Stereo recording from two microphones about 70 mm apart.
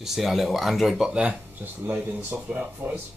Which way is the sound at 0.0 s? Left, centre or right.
Centre.